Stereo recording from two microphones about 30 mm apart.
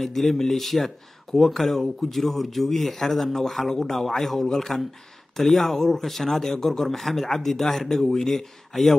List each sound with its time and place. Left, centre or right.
0.0 s a man's voice: centre